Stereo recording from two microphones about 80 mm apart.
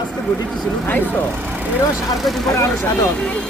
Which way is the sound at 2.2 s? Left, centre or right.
Centre.